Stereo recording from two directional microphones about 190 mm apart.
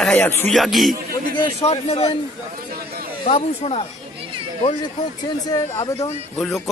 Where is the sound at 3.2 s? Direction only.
35° left (ahead or behind).